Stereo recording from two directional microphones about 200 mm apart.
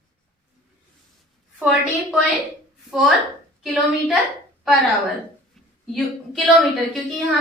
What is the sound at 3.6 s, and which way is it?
Speech, centre (ahead or behind).